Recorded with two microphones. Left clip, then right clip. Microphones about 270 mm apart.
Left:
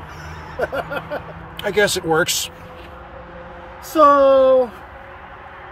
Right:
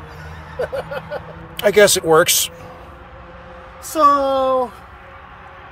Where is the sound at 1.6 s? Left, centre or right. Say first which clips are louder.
Right 6 dB; centre.